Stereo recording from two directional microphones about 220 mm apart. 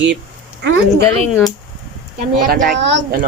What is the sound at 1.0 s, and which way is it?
Speech, 10° left (ahead or behind).